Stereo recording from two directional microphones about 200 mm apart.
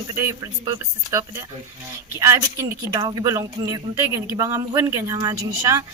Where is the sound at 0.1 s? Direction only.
15° right (ahead or behind).